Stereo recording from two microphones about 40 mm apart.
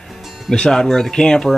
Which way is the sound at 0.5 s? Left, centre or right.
Centre.